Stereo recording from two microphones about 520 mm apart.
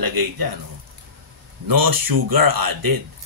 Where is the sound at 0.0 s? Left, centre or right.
Right.